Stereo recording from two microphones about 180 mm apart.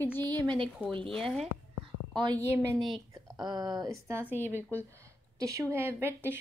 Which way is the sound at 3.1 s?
20° right (ahead or behind).